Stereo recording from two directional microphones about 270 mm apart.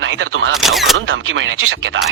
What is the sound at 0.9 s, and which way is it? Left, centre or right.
Speech, right.